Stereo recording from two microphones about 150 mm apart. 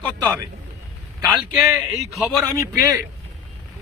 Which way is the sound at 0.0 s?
10° left (ahead or behind).